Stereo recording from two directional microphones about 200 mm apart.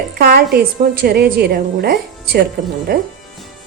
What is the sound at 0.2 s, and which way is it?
Speech, 50° right (ahead or behind).